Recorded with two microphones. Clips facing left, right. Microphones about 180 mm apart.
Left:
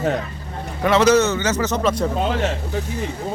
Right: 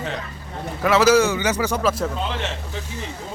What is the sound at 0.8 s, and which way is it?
A man's voice, 5° right (ahead or behind).